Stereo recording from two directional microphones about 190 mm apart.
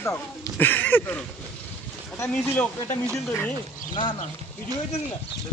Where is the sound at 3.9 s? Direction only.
25° left (ahead or behind).